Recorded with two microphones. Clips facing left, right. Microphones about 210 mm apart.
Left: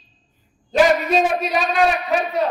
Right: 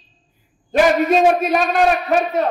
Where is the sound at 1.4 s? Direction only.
50° right (ahead or behind).